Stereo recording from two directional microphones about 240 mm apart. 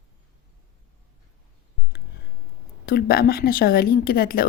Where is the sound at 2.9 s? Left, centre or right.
Left.